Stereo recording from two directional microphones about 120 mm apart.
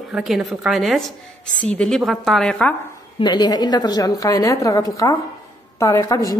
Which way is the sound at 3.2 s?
35° left (ahead or behind).